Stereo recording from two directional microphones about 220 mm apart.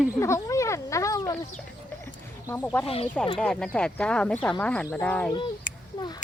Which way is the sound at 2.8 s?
25° left (ahead or behind).